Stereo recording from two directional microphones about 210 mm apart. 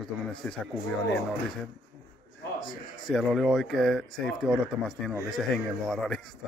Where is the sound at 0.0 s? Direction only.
5° left (ahead or behind).